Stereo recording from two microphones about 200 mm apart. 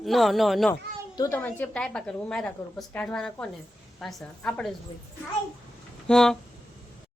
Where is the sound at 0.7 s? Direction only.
15° left (ahead or behind).